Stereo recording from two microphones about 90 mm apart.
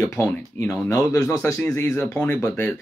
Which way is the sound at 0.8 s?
35° left (ahead or behind).